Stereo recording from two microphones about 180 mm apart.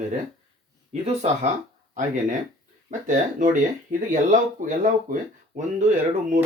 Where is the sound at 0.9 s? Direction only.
40° right (ahead or behind).